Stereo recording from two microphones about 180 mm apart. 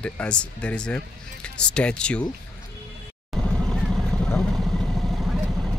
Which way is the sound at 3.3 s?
Centre (ahead or behind).